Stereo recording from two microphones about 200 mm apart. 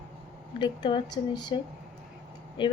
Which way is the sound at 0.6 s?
25° left (ahead or behind).